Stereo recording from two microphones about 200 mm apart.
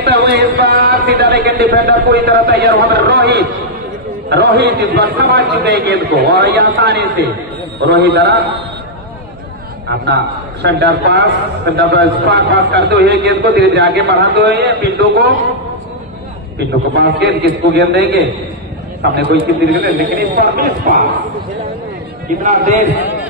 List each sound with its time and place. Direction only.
0.0 s a man's voice: 55° right (ahead or behind)
10.0 s a man's voice: 55° right (ahead or behind)
16.5 s a man's voice: 55° right (ahead or behind)
19.7 s a man's voice: 45° right (ahead or behind)
22.4 s a man's voice: 35° right (ahead or behind)